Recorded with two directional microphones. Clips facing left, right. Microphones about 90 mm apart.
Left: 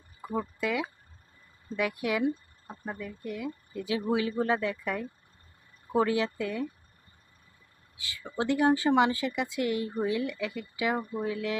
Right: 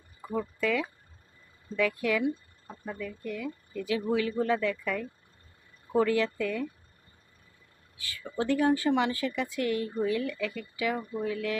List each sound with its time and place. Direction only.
0.2 s speech: 20° left (ahead or behind)
7.9 s speech: 20° left (ahead or behind)